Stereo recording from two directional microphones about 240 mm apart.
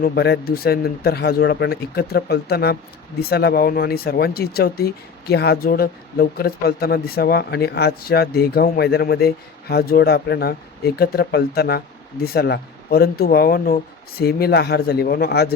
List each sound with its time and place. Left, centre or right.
0.0 s speech: left